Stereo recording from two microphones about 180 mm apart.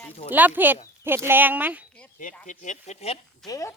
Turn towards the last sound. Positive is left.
turn(degrees=20)  # may be behind; listen again after turning